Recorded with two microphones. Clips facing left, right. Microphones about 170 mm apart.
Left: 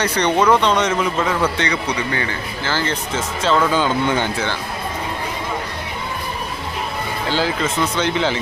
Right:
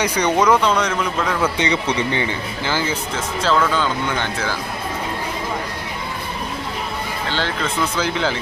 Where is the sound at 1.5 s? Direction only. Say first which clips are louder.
Right 2 dB; 20° right (ahead or behind).